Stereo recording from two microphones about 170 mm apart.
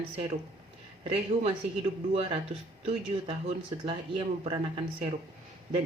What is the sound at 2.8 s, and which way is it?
Speech, 35° right (ahead or behind).